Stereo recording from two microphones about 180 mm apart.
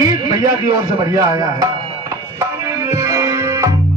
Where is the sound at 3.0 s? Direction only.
15° right (ahead or behind).